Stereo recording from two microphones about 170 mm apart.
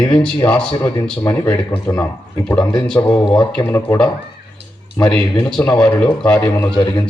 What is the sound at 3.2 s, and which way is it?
Speech, 25° left (ahead or behind).